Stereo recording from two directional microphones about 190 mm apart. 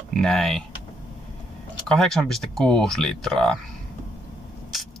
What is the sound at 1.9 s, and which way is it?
Speech, centre (ahead or behind).